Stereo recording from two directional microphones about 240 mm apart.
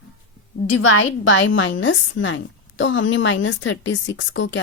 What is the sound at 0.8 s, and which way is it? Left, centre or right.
A woman's voice, left.